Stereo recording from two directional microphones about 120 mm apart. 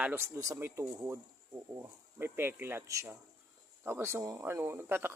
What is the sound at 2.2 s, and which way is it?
Speech, 20° right (ahead or behind).